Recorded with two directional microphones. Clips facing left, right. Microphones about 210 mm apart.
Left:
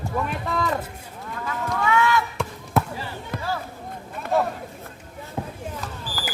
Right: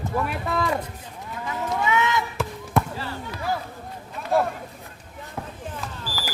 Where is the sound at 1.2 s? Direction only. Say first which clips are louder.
Even; 20° right (ahead or behind).